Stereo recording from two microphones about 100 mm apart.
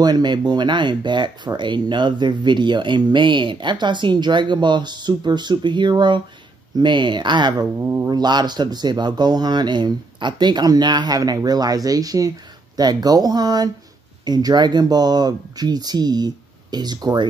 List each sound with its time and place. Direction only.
0.0 s speech: 45° right (ahead or behind)
8.2 s speech: 45° right (ahead or behind)